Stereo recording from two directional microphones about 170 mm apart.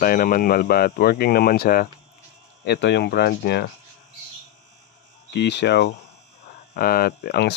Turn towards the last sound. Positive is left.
turn(degrees=70)  # may be behind; listen again after turning